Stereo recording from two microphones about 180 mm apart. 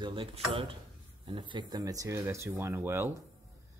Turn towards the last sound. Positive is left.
turn(degrees=-15)  # may be behind; listen again after turning